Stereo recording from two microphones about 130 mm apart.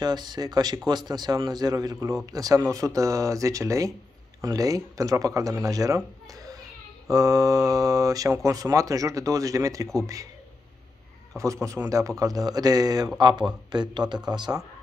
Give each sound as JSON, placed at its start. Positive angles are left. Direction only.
{"t": 0.0, "sound": "a man's voice", "side_deg": -30}
{"t": 11.3, "sound": "a man's voice", "side_deg": -25}